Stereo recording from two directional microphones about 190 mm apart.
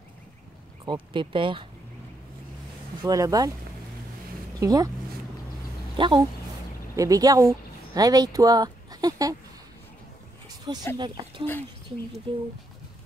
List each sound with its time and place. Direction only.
1.1 s speech: 25° right (ahead or behind)
3.0 s speech: 20° right (ahead or behind)
4.6 s speech: 20° right (ahead or behind)
5.9 s speech: 25° right (ahead or behind)
10.7 s speech: 25° right (ahead or behind)